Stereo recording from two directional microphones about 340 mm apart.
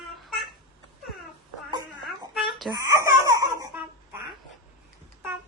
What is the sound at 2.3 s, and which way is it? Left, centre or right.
Babbling, centre.